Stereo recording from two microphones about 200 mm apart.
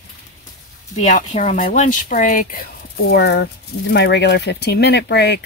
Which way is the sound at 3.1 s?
55° left (ahead or behind).